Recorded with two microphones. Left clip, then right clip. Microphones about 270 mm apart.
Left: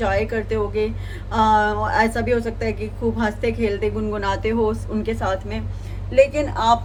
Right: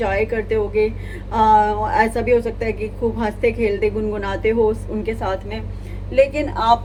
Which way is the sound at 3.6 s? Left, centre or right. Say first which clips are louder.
Right 3 dB; left.